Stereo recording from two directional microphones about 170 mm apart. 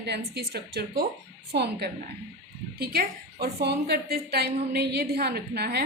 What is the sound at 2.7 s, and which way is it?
A woman's voice, 65° right (ahead or behind).